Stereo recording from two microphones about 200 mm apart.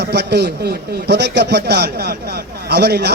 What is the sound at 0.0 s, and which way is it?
A man's voice, 55° right (ahead or behind).